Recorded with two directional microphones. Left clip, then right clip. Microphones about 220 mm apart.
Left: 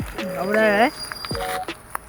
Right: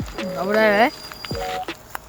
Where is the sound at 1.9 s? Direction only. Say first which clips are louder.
Left 2 dB; 45° right (ahead or behind).